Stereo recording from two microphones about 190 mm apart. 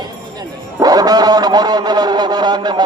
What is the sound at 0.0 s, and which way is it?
A man's voice, 20° right (ahead or behind).